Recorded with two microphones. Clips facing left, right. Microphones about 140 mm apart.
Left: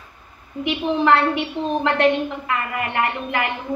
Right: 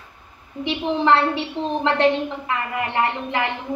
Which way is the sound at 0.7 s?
25° right (ahead or behind).